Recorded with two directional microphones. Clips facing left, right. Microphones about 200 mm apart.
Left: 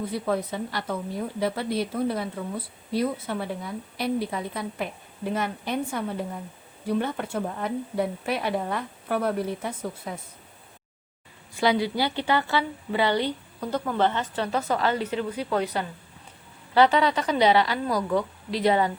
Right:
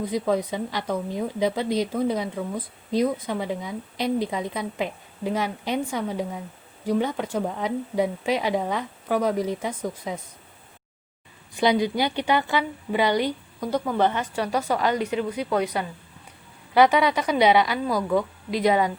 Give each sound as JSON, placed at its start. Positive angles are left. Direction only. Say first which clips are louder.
{"t": 0.0, "sound": "a woman's voice", "louder": "right 3 dB", "side_deg": -15}
{"t": 11.5, "sound": "a woman's voice", "louder": "right 2 dB", "side_deg": -20}